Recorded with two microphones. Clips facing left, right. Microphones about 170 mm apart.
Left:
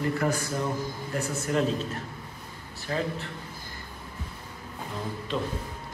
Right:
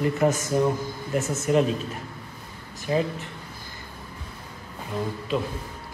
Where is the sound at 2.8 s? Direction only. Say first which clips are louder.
Right 5 dB; 15° right (ahead or behind).